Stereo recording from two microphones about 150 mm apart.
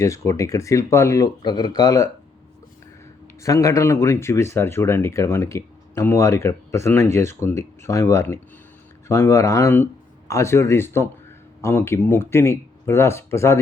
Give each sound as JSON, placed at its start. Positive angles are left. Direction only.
{"t": 0.0, "sound": "speech", "side_deg": 20}
{"t": 3.4, "sound": "speech", "side_deg": 20}